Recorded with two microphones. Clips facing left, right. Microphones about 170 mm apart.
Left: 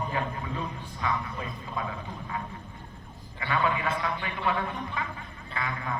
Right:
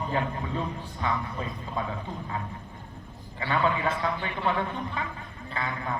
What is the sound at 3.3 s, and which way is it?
Speech, 30° right (ahead or behind).